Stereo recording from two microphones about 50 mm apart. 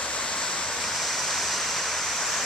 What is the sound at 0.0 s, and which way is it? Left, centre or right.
Waterfall, centre.